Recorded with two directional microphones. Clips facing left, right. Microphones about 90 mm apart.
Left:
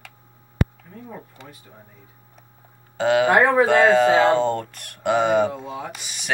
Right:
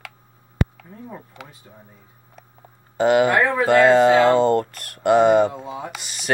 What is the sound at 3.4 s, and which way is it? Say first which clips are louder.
Speech: left 3 dB; 40° left (ahead or behind).